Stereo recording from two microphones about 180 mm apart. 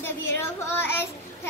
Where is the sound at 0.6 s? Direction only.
15° left (ahead or behind).